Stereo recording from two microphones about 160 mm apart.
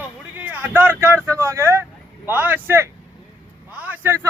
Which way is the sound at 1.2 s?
15° right (ahead or behind).